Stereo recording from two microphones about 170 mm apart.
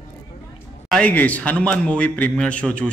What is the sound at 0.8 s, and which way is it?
A man's voice, 5° left (ahead or behind).